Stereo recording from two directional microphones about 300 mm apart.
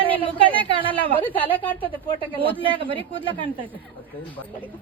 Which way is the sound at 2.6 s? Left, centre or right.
Centre.